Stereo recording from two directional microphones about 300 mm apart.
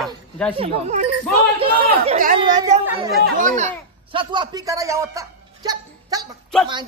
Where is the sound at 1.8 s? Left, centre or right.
Right.